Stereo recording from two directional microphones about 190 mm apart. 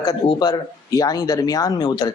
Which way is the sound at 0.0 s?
20° left (ahead or behind).